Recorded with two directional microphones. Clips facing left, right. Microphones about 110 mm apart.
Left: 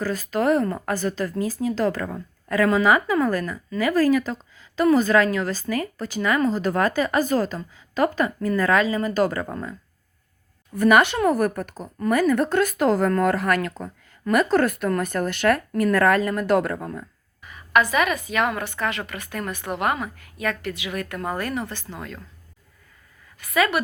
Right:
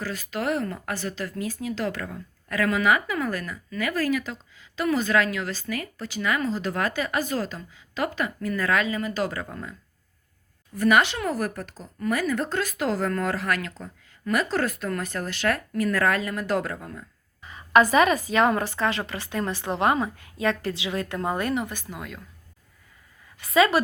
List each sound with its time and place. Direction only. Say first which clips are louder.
0.0 s speech: left 6 dB; 40° left (ahead or behind)
3.7 s speech: left 6 dB; 30° left (ahead or behind); by 9.7 s 45° left (ahead or behind)
10.8 s speech: left 4 dB; 50° left (ahead or behind)
17.4 s a woman's voice: right 2 dB; 30° right (ahead or behind); by 22.2 s 5° right (ahead or behind)
23.4 s a woman's voice: right 2 dB; 25° right (ahead or behind)